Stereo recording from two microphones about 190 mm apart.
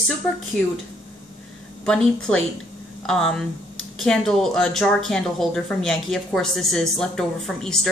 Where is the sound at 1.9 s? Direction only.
5° left (ahead or behind).